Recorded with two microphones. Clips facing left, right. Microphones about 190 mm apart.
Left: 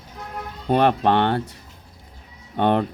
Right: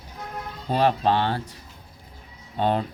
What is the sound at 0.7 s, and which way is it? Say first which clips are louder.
Speech: left 3 dB; 60° left (ahead or behind).